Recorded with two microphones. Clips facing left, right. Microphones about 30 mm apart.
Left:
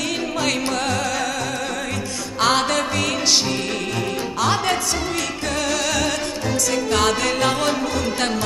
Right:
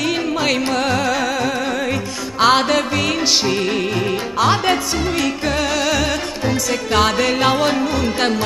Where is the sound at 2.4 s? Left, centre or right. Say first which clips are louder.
Right 4 dB; centre.